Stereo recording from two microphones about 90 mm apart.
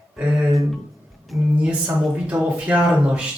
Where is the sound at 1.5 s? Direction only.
15° right (ahead or behind).